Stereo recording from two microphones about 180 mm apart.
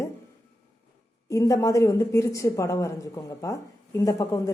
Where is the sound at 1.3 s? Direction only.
20° left (ahead or behind).